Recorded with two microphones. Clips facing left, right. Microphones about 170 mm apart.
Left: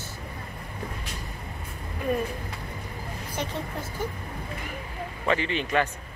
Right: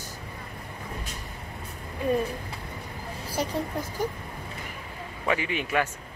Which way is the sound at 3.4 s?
40° right (ahead or behind).